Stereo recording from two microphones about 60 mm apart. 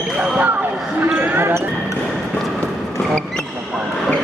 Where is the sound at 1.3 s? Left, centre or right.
Right.